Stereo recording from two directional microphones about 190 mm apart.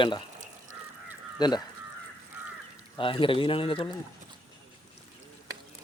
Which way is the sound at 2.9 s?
25° left (ahead or behind).